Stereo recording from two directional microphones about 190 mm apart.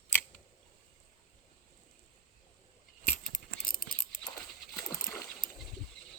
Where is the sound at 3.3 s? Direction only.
45° left (ahead or behind).